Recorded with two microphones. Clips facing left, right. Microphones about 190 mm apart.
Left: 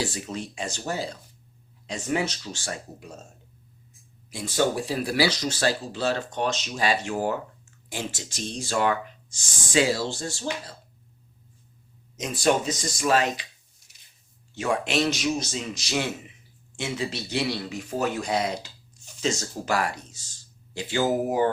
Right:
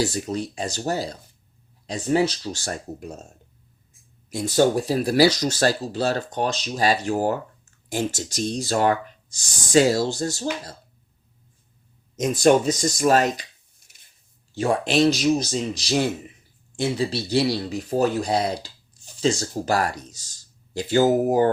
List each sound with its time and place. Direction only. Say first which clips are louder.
0.0 s speech: right 6 dB; 40° right (ahead or behind)
4.3 s speech: right 6 dB; 40° right (ahead or behind)
12.1 s speech: right 6 dB; 45° right (ahead or behind)